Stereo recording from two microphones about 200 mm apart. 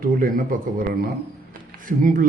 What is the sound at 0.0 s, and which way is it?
A man's voice, 45° right (ahead or behind).